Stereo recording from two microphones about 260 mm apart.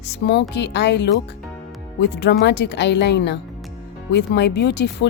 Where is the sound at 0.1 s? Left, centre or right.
Left.